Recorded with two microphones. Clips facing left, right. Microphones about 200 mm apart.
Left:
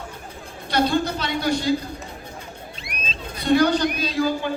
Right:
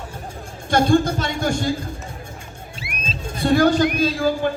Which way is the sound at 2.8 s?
5° right (ahead or behind).